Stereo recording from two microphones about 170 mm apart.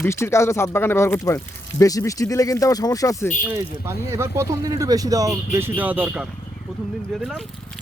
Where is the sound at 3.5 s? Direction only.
15° right (ahead or behind); by 7.4 s centre (ahead or behind).